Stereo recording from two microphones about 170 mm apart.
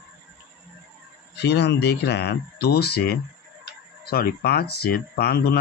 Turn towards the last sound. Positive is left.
turn(degrees=65)  # may be behind; listen again after turning